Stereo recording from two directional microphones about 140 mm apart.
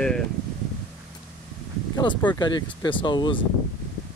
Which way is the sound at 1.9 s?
35° left (ahead or behind).